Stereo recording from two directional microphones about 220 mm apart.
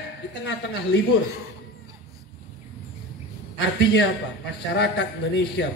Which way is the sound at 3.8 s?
50° left (ahead or behind).